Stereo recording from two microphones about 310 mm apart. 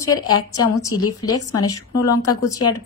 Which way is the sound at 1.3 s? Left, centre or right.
Left.